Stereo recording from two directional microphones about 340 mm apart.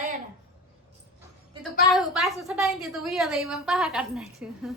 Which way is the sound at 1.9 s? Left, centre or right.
Centre.